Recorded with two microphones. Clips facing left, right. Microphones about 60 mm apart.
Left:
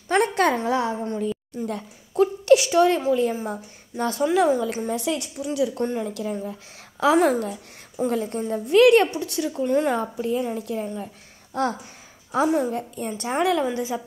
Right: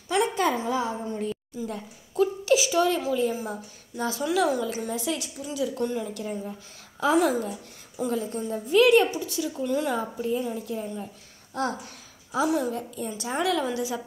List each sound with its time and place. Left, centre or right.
0.1 s a sound: left
2.1 s a woman's voice: left
4.3 s a woman's voice: left
4.7 s a woman's voice: left
5.8 s a woman's voice: left
6.1 s speech: left
7.2 s a woman's voice: left
9.6 s a woman's voice: left
10.1 s a woman's voice: left
10.4 s a woman's voice: left
11.6 s a woman's voice: left
13.4 s a woman's voice: left